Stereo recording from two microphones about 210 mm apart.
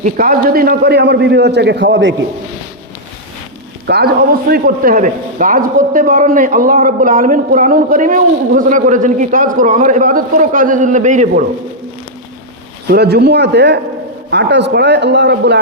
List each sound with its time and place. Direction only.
0.0 s a man's voice: 40° right (ahead or behind); by 2.1 s 60° right (ahead or behind)
3.8 s a man's voice: 50° right (ahead or behind)
12.9 s a man's voice: 50° right (ahead or behind)